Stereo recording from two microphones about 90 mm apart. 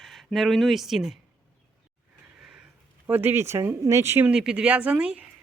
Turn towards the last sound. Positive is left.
turn(degrees=-15)  # may be behind; listen again after turning